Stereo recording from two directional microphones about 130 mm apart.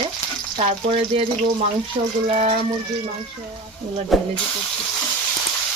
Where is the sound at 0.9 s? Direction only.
55° right (ahead or behind).